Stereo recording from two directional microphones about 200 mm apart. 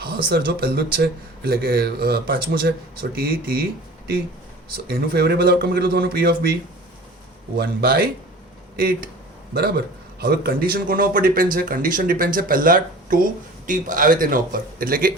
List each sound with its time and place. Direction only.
0.3 s speech: 50° right (ahead or behind)
9.6 s speech: 50° right (ahead or behind)